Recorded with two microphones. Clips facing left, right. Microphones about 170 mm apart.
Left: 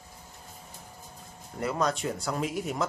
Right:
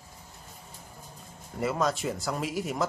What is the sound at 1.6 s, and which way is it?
Speech, centre (ahead or behind).